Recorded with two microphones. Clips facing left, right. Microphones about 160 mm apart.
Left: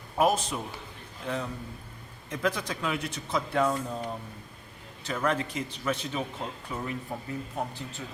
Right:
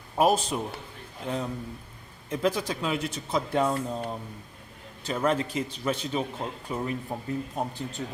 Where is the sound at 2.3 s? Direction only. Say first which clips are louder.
Right 3 dB; 30° right (ahead or behind).